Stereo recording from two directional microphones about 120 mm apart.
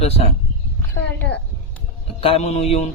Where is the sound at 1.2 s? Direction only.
10° left (ahead or behind).